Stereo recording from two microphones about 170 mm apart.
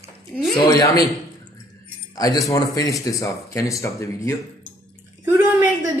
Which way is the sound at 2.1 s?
20° left (ahead or behind).